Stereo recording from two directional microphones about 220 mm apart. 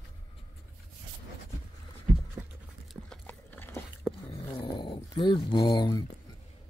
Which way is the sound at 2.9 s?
5° left (ahead or behind).